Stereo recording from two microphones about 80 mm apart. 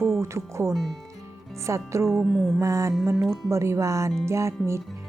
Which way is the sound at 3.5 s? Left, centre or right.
Right.